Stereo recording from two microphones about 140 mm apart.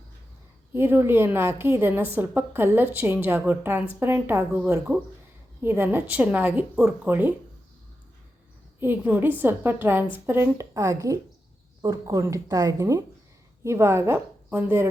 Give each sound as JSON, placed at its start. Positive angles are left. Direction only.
{"t": 0.7, "sound": "a woman's voice", "side_deg": -15}
{"t": 8.8, "sound": "a woman's voice", "side_deg": -15}